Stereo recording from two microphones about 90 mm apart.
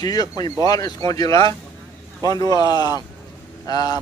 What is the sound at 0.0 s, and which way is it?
A man's voice, 45° left (ahead or behind).